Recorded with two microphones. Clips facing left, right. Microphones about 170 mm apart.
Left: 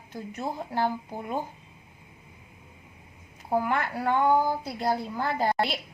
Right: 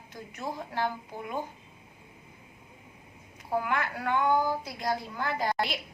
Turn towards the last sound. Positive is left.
turn(degrees=35)  # may be behind; listen again after turning